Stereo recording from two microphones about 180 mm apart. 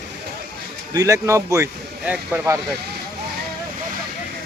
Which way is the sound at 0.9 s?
15° right (ahead or behind).